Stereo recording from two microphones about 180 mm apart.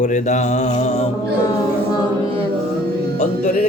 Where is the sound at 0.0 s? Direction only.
45° left (ahead or behind).